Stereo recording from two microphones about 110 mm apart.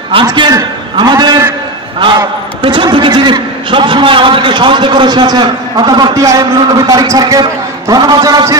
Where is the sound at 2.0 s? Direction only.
45° right (ahead or behind).